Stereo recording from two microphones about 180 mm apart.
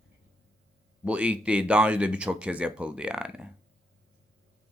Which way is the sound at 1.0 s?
5° right (ahead or behind).